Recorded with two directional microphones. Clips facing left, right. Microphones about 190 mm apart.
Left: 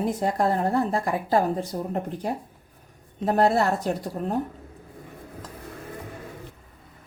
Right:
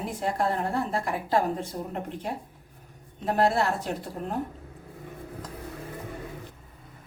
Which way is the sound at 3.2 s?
40° left (ahead or behind).